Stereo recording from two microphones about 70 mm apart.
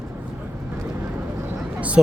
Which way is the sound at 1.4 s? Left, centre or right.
Centre.